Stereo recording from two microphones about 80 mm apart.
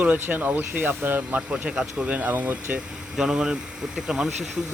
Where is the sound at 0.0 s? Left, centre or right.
Right.